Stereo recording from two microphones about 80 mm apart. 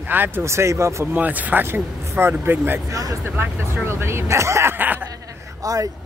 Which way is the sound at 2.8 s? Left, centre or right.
Right.